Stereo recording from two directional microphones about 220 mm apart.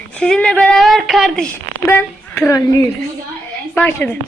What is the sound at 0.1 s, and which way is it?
A woman's voice, 5° left (ahead or behind).